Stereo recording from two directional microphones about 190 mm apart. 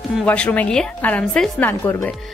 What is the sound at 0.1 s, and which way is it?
A woman's voice, 5° left (ahead or behind).